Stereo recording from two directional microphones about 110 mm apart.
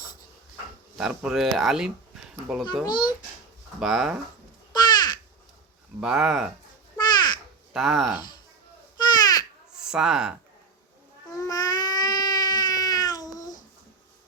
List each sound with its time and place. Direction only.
0.9 s speech: 5° right (ahead or behind)
2.8 s a child's voice: 40° left (ahead or behind)
3.8 s speech: 5° right (ahead or behind)
4.7 s crow: 40° left (ahead or behind)
6.0 s speech: 5° right (ahead or behind)
7.0 s a sound: 40° left (ahead or behind)
7.7 s speech: centre (ahead or behind)
9.1 s babbling: 35° left (ahead or behind)
9.7 s speech: 5° right (ahead or behind)
11.3 s a sound: 35° left (ahead or behind)